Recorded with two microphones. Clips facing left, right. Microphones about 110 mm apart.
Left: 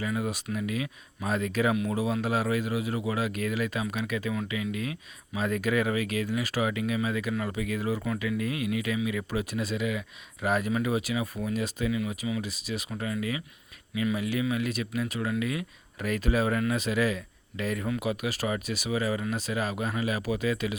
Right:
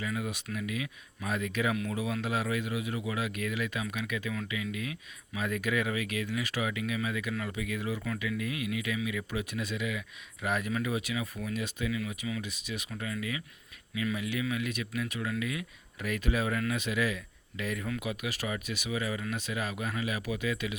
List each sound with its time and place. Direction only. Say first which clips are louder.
0.0 s a man's voice: left 4 dB; 35° left (ahead or behind)